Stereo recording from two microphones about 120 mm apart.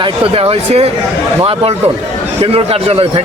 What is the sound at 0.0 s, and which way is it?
Speech, 55° right (ahead or behind).